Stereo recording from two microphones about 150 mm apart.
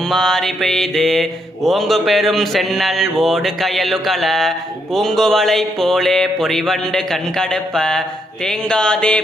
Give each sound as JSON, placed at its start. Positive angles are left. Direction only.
{"t": 0.0, "sound": "mantra", "side_deg": 0}